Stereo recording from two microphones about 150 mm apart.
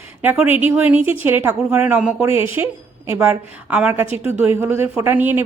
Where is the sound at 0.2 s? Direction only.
10° right (ahead or behind).